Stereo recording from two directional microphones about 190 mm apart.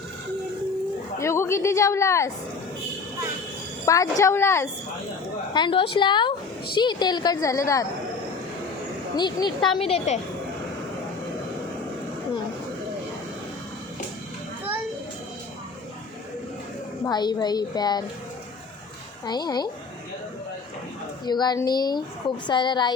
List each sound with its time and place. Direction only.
1.2 s a woman's voice: 15° left (ahead or behind)
3.8 s a woman's voice: 15° left (ahead or behind)
5.5 s a woman's voice: 25° left (ahead or behind)
9.1 s a woman's voice: 25° left (ahead or behind)
17.0 s a woman's voice: 20° left (ahead or behind)
19.2 s a woman's voice: 20° left (ahead or behind)
21.2 s a woman's voice: 20° left (ahead or behind)